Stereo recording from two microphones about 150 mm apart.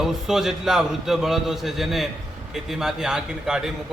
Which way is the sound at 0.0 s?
5° right (ahead or behind).